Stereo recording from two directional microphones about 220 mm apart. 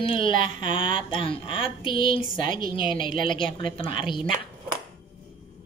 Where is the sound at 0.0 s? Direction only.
25° left (ahead or behind).